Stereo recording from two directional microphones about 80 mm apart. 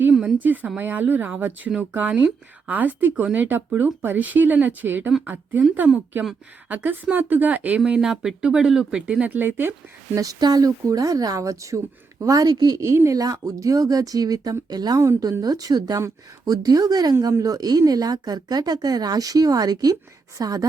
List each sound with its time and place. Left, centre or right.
0.1 s a sound: centre
0.3 s speech: right
6.7 s speech: right
7.9 s speech: centre; by 9.7 s right
10.2 s speech: right
13.1 s speech: right
16.0 s speech: right
16.6 s speech: right